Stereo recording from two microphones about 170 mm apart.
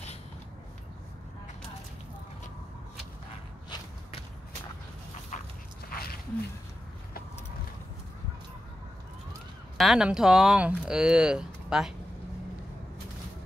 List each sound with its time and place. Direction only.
5.3 s dog: 45° left (ahead or behind)
5.9 s a sound: 60° left (ahead or behind)
9.8 s speech: 5° right (ahead or behind)